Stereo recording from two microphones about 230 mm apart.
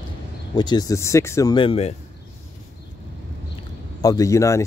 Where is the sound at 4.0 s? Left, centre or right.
Centre.